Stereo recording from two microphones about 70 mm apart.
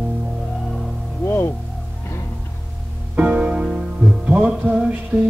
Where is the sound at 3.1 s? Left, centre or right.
Centre.